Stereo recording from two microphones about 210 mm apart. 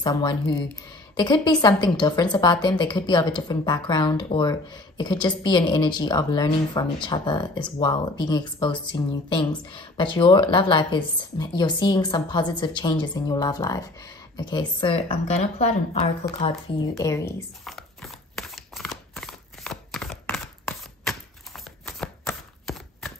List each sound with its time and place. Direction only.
0.0 s speech: 20° left (ahead or behind)
17.6 s a sound: centre (ahead or behind)
21.8 s chopping: 5° left (ahead or behind)